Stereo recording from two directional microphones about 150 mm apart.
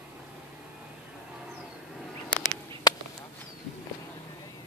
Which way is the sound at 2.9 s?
25° left (ahead or behind).